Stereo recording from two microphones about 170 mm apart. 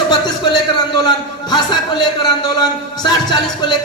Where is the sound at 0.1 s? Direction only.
25° left (ahead or behind).